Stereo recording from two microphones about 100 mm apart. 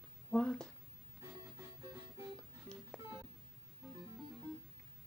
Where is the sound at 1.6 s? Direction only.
30° right (ahead or behind).